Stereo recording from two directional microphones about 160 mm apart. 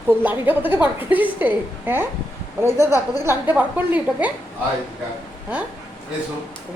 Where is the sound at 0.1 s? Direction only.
10° right (ahead or behind).